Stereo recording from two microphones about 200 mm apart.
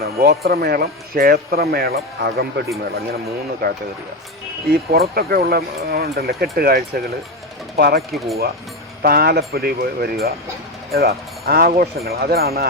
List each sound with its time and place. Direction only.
0.0 s speech: 50° right (ahead or behind)
8.1 s speech: centre (ahead or behind)
9.0 s speech: 50° right (ahead or behind)